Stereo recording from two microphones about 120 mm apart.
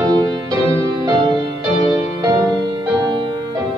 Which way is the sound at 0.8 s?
30° right (ahead or behind).